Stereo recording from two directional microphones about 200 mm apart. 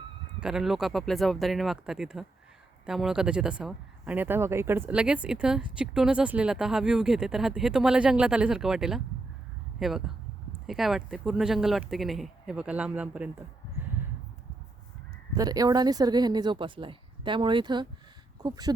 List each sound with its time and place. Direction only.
0.3 s speech: 5° right (ahead or behind)
15.4 s speech: 20° right (ahead or behind)